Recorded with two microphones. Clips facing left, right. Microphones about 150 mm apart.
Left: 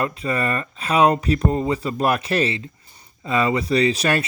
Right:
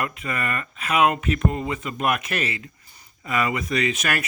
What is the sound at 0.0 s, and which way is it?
Speech, 30° left (ahead or behind).